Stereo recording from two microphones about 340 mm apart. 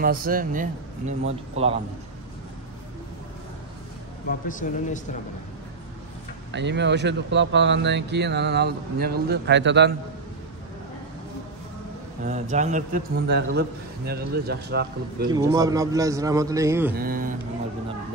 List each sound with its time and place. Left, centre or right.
0.0 s a man's voice: right
4.3 s speech: left
6.5 s speech: right
12.3 s a man's voice: right
15.2 s a man's voice: centre
16.9 s a man's voice: right